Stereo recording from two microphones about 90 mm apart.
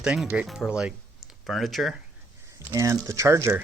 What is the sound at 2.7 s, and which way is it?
Speech, 35° right (ahead or behind).